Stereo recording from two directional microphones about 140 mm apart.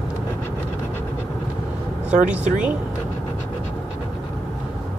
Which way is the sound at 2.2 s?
10° right (ahead or behind).